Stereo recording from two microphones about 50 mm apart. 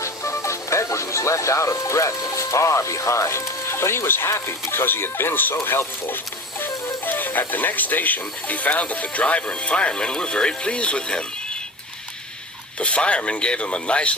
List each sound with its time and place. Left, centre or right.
0.0 s speech: left
4.7 s speech: left
12.8 s speech: left